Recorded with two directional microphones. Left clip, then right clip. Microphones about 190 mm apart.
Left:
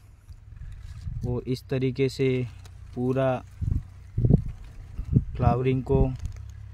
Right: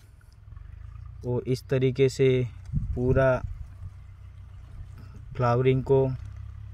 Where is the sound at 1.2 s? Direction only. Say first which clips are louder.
Right 3 dB; 5° right (ahead or behind).